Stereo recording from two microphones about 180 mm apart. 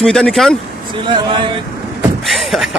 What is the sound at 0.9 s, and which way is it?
Speech, 25° right (ahead or behind).